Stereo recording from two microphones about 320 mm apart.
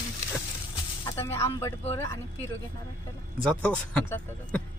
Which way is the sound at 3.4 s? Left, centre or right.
Centre.